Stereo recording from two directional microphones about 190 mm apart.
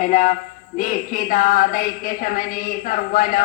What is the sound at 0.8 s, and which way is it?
A man's voice, 45° left (ahead or behind).